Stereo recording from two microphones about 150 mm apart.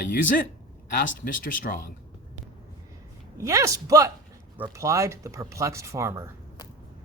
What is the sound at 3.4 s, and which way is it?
Speech, 20° right (ahead or behind).